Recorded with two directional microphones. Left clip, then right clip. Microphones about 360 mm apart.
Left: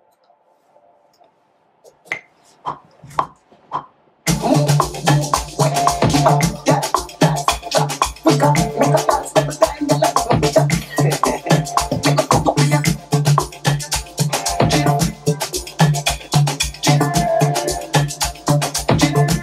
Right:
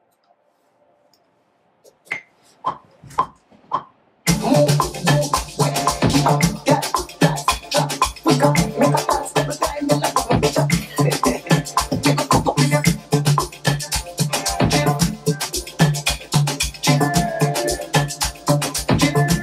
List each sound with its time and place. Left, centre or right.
4.5 s music: left